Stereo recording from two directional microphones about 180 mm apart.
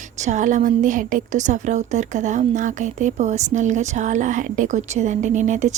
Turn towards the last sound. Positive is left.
turn(degrees=-40)  # may be behind; listen again after turning